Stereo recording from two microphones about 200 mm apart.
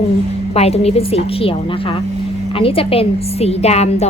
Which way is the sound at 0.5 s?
30° left (ahead or behind).